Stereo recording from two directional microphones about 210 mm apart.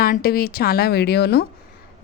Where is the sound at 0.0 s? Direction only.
45° left (ahead or behind).